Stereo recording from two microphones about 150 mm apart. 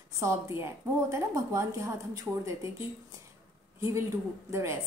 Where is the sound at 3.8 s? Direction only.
20° right (ahead or behind).